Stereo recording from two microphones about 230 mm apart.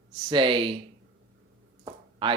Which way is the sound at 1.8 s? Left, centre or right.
Right.